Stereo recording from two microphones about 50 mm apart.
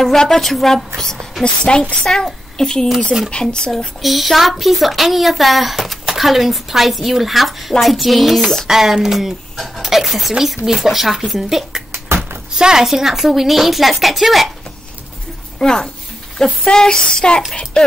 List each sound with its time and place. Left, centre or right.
0.0 s a woman's voice: centre
1.4 s a woman's voice: centre
2.0 s a woman's voice: centre
3.7 s speech: centre
15.6 s a woman's voice: centre